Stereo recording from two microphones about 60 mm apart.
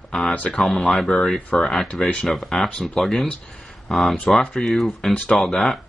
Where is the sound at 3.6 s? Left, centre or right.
Centre.